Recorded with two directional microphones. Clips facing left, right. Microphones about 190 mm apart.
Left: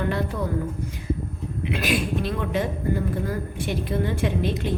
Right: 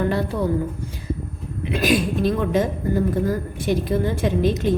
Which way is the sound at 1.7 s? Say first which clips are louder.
Right 5 dB; 40° right (ahead or behind).